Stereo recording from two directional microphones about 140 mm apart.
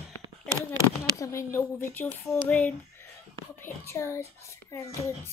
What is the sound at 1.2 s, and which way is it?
A child's voice, 20° left (ahead or behind).